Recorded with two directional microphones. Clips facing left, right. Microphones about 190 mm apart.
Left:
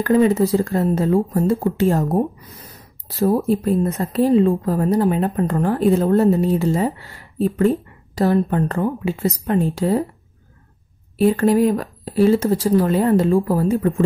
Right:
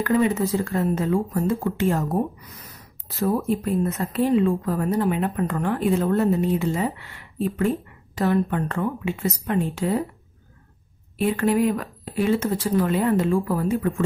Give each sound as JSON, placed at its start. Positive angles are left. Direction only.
{"t": 0.0, "sound": "speech", "side_deg": 35}
{"t": 11.1, "sound": "speech", "side_deg": 35}